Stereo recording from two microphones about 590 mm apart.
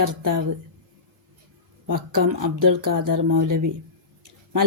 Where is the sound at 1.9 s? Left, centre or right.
Right.